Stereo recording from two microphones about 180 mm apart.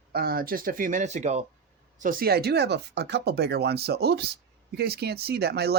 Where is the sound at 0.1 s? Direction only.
55° right (ahead or behind); by 1.5 s 40° right (ahead or behind).